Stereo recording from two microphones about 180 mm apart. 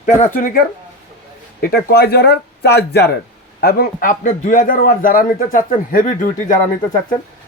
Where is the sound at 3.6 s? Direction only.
55° left (ahead or behind).